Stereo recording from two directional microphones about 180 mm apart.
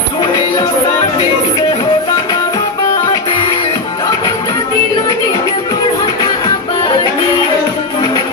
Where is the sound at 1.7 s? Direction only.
25° left (ahead or behind).